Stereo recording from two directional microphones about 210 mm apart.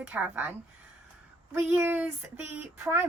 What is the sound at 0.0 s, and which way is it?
Speech, 10° right (ahead or behind).